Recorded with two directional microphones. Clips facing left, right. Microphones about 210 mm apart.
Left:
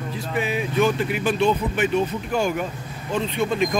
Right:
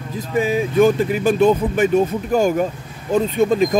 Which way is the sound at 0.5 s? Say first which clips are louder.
Right 6 dB; 45° right (ahead or behind).